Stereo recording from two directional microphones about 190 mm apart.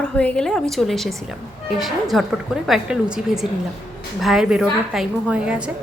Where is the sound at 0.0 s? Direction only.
5° left (ahead or behind).